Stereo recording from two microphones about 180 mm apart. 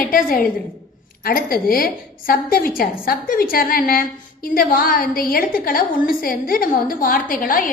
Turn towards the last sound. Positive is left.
turn(degrees=50)  # may be behind; listen again after turning